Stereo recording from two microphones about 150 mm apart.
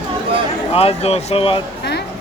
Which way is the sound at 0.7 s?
40° left (ahead or behind).